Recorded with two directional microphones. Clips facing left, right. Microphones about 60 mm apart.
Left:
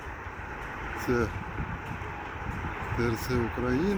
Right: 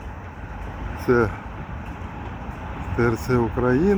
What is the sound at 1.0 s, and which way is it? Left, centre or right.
Speech, right.